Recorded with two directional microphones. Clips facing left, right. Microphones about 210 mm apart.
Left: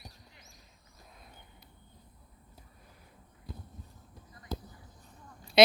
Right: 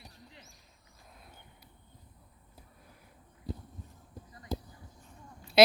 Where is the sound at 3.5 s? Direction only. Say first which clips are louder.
Right 7 dB; 35° right (ahead or behind).